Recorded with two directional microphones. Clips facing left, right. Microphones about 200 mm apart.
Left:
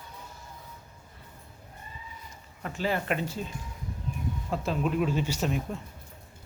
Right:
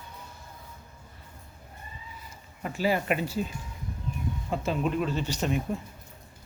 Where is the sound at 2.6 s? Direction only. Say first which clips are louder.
Right 3 dB; 10° right (ahead or behind).